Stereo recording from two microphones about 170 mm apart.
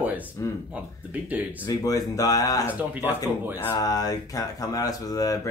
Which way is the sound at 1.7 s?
20° left (ahead or behind).